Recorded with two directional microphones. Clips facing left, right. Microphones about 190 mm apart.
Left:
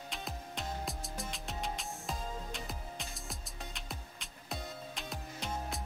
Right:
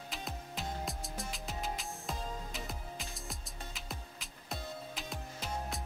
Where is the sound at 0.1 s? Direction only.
Centre (ahead or behind).